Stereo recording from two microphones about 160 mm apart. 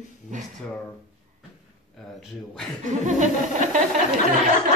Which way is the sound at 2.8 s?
50° right (ahead or behind).